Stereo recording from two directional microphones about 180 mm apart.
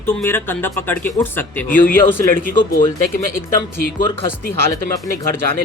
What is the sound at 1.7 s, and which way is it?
Speech, 50° left (ahead or behind).